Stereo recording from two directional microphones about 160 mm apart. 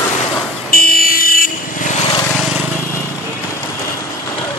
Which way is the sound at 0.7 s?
70° left (ahead or behind).